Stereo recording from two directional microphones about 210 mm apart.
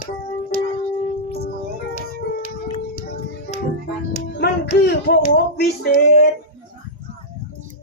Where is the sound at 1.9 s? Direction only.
35° left (ahead or behind).